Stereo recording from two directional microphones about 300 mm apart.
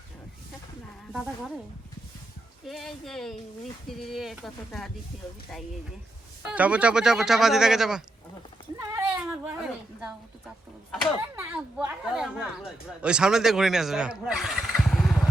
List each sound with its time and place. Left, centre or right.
1.1 s speech: centre
2.6 s speech: centre
6.4 s speech: centre
8.8 s a sound: centre
10.9 s speech: centre